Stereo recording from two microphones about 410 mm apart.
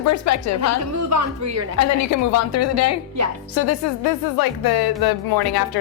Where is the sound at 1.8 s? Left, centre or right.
Left.